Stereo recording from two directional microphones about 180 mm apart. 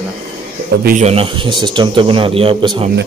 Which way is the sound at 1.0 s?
35° right (ahead or behind).